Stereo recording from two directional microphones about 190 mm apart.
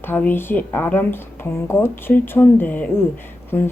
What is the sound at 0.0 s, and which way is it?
A woman's voice, 10° left (ahead or behind).